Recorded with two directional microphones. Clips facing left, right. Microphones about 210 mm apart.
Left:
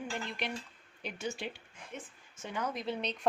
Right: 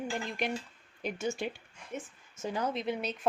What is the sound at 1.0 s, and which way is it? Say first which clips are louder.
A woman's voice: right 5 dB; 45° right (ahead or behind).